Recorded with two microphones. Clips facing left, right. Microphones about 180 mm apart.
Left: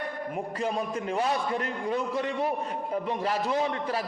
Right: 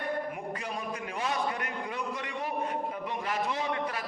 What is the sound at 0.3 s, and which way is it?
A man's voice, 35° left (ahead or behind).